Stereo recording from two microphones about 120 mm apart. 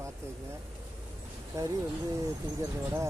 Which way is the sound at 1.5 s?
25° right (ahead or behind).